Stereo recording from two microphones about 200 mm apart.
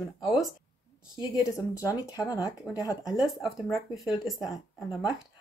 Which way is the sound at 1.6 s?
15° left (ahead or behind).